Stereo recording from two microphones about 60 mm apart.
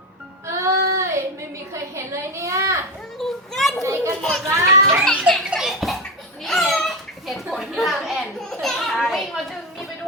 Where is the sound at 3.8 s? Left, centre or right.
Right.